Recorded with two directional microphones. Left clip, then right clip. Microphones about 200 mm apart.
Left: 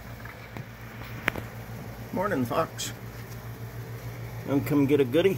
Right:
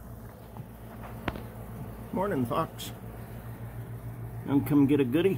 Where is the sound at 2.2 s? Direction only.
20° right (ahead or behind).